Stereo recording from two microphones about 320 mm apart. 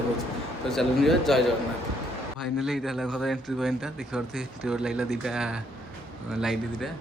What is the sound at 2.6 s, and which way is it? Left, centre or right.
Speech, centre.